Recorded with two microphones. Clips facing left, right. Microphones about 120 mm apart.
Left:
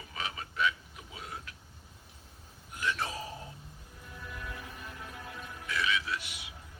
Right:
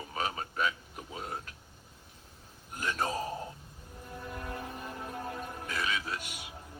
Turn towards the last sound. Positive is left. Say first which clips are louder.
# even
turn(degrees=-45)  # may be behind; listen again after turning